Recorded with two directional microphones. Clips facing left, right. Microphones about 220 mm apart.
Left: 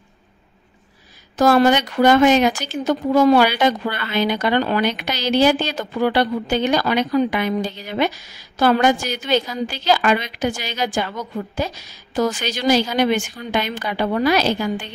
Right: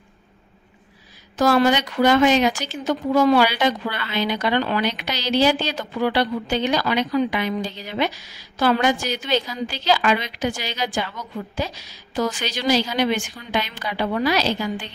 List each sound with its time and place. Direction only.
1.4 s a woman's voice: 50° left (ahead or behind)